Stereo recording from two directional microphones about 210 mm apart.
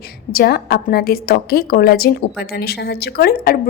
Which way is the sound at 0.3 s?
45° left (ahead or behind).